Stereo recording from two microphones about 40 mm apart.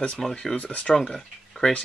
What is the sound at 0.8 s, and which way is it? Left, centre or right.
Speech, centre.